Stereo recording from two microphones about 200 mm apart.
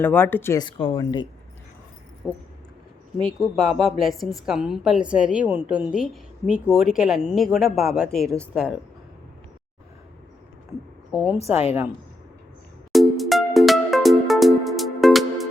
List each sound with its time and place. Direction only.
0.0 s speech: 10° left (ahead or behind)
0.6 s speech: 25° left (ahead or behind)
2.2 s a woman's voice: centre (ahead or behind)
11.1 s a woman's voice: 5° right (ahead or behind)
11.4 s a woman's voice: 30° left (ahead or behind)
12.9 s music: centre (ahead or behind)